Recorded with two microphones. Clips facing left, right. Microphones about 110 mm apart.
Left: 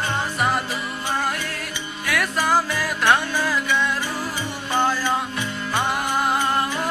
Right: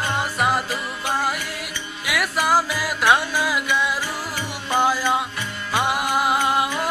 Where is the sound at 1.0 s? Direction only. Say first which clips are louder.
Right 1 dB; 10° right (ahead or behind).